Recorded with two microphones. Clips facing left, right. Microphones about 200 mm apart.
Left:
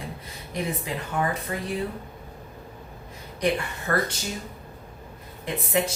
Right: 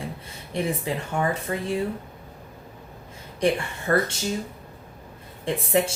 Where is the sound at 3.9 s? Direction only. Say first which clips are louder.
Right 4 dB; 25° right (ahead or behind).